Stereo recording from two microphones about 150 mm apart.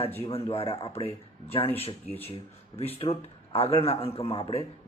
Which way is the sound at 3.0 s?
40° left (ahead or behind).